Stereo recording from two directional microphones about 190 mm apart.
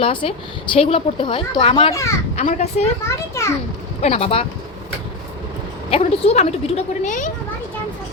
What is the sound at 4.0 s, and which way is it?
Speech, 30° left (ahead or behind).